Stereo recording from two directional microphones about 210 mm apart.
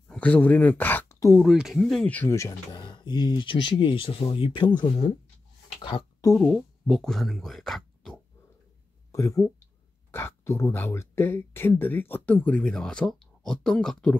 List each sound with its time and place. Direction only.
0.1 s speech: 5° left (ahead or behind)
1.4 s speech: centre (ahead or behind); by 6.3 s 20° left (ahead or behind)
6.3 s speech: 5° left (ahead or behind)
9.1 s speech: 15° left (ahead or behind)